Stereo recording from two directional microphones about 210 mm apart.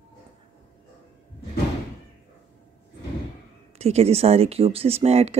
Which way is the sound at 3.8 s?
30° right (ahead or behind).